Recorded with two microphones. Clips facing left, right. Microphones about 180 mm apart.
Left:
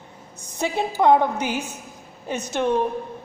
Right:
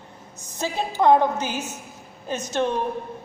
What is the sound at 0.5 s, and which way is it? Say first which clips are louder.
A woman's voice: left 2 dB; 15° left (ahead or behind).